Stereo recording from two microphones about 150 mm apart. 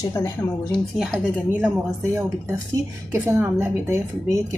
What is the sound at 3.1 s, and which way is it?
Speech, 15° right (ahead or behind).